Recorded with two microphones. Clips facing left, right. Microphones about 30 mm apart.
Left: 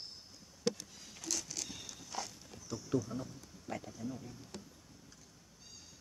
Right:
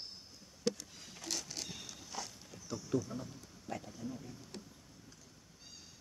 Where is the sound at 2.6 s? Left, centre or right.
Centre.